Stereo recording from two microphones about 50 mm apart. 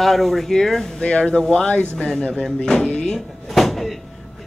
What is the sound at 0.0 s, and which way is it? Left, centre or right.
Speech, centre.